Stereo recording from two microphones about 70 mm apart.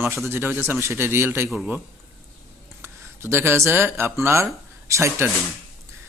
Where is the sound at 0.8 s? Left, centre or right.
Right.